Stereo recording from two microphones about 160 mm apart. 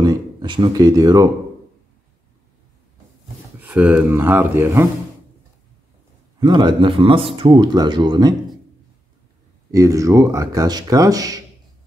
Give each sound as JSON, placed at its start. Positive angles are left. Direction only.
{"t": 0.0, "sound": "speech", "side_deg": -25}
{"t": 3.5, "sound": "speech", "side_deg": -10}
{"t": 6.4, "sound": "a man's voice", "side_deg": -25}
{"t": 9.7, "sound": "speech", "side_deg": -20}